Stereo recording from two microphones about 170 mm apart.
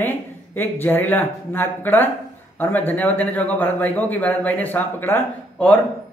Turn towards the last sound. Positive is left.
turn(degrees=10)  # may be behind; listen again after turning